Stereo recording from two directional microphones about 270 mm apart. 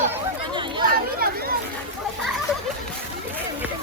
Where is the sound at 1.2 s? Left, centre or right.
Right.